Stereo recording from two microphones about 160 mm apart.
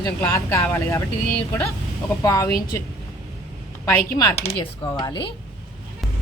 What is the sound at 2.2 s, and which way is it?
Speech, 20° left (ahead or behind).